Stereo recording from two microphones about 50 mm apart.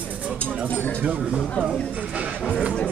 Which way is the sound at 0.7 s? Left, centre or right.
Left.